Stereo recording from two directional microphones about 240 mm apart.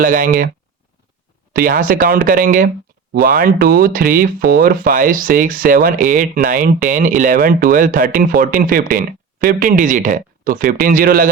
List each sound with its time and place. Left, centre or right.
0.0 s speech: right
1.5 s speech: right